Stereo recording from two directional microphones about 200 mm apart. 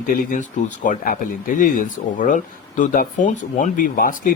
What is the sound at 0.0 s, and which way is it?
Speech, 45° left (ahead or behind).